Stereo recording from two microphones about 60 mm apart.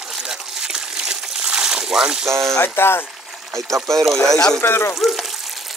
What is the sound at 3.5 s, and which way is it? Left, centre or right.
Speech, right.